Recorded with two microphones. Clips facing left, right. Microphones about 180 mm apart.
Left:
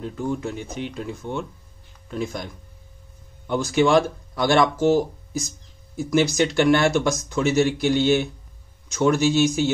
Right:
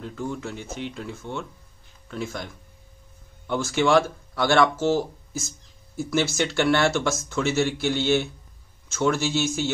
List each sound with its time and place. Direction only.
0.0 s speech: 15° left (ahead or behind)